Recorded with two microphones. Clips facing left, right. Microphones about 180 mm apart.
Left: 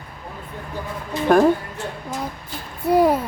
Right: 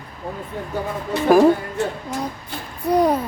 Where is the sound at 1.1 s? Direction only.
70° right (ahead or behind).